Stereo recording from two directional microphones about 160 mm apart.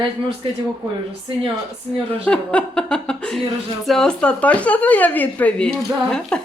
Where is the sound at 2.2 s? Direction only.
5° left (ahead or behind).